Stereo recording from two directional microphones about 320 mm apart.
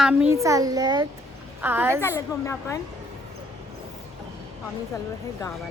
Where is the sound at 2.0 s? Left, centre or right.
Centre.